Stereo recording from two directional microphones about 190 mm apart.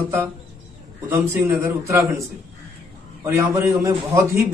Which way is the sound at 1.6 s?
15° right (ahead or behind).